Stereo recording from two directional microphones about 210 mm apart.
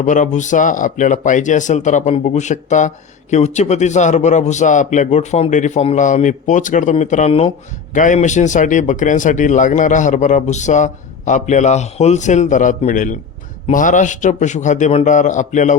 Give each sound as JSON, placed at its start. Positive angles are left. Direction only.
{"t": 0.0, "sound": "speech", "side_deg": 35}